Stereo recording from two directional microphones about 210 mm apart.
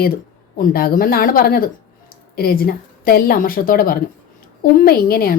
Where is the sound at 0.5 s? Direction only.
45° left (ahead or behind).